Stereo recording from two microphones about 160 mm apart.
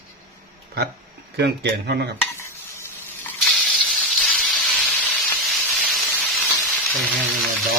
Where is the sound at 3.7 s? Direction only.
Centre (ahead or behind).